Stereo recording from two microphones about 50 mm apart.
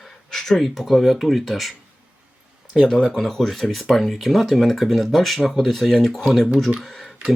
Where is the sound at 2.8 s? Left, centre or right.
Centre.